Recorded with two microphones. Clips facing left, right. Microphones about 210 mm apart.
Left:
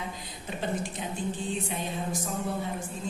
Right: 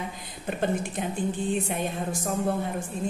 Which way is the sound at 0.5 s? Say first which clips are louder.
Right 5 dB; 55° right (ahead or behind).